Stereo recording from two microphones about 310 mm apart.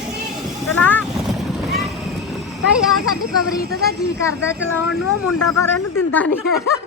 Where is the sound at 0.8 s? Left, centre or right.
Centre.